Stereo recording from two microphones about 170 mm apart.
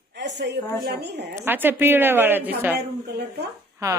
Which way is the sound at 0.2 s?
90° right.